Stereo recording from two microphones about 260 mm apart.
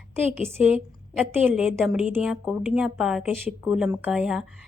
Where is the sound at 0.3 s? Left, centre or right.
Centre.